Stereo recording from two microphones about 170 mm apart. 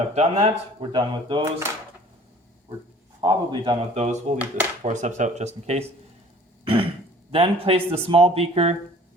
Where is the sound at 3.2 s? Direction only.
30° right (ahead or behind).